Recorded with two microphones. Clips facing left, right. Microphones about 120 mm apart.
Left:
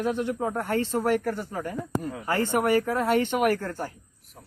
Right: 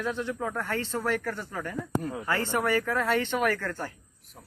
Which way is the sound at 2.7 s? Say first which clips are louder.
Left 3 dB; 35° left (ahead or behind).